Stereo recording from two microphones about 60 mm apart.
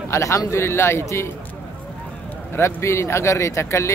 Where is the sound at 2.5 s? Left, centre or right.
Left.